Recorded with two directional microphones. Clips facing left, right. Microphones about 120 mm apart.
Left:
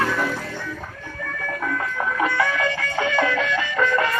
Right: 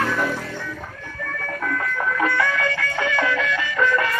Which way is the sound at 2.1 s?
20° left (ahead or behind).